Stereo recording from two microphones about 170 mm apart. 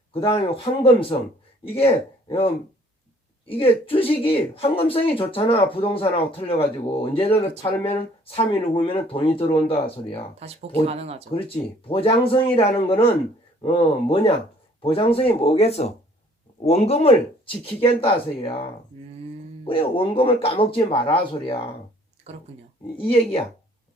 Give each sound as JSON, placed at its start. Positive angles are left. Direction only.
{"t": 0.1, "sound": "speech", "side_deg": 35}
{"t": 3.4, "sound": "speech", "side_deg": 35}
{"t": 10.4, "sound": "speech", "side_deg": -35}
{"t": 11.3, "sound": "speech", "side_deg": 35}
{"t": 22.3, "sound": "speech", "side_deg": -40}
{"t": 23.0, "sound": "speech", "side_deg": 30}